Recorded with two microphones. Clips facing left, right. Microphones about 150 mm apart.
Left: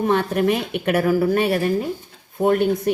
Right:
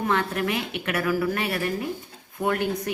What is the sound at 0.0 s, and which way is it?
A woman's voice, 25° left (ahead or behind).